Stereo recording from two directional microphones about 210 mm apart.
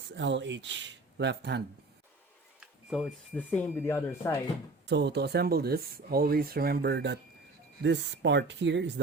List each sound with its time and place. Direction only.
0.2 s speech: 60° right (ahead or behind)
2.6 s a sound: 5° right (ahead or behind)
3.3 s speech: 10° left (ahead or behind)
4.9 s speech: 55° right (ahead or behind)